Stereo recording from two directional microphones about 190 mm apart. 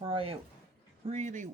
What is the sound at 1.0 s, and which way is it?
Speech, 40° right (ahead or behind).